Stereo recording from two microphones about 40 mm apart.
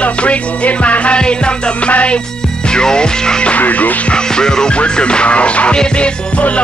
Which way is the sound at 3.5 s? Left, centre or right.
Left.